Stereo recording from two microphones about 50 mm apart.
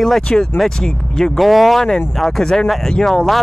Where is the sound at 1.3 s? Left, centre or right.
Centre.